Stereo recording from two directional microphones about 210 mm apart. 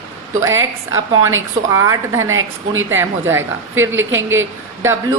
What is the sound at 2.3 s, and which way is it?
Speech, 70° right (ahead or behind).